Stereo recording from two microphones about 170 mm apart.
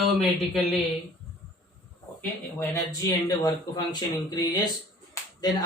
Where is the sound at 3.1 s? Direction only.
20° left (ahead or behind).